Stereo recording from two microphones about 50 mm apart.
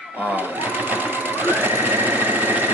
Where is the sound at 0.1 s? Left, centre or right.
Right.